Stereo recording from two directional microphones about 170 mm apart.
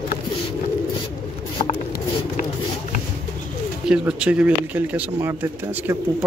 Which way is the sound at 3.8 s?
5° right (ahead or behind).